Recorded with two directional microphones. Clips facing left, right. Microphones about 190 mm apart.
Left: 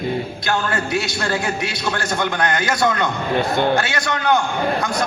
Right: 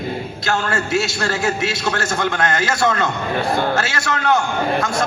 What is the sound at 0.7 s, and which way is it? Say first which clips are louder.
A man's voice: right 2 dB; 25° right (ahead or behind).